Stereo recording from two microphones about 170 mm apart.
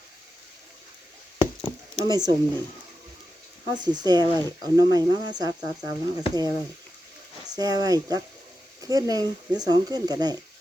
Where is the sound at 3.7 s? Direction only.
25° right (ahead or behind).